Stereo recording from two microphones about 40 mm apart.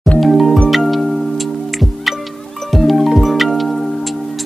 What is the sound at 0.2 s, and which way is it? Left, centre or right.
Music, centre.